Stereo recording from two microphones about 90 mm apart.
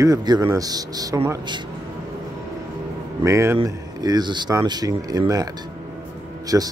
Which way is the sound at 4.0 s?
50° right (ahead or behind).